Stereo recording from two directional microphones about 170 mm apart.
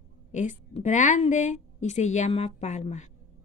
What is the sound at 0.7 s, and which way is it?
A woman's voice, 45° left (ahead or behind).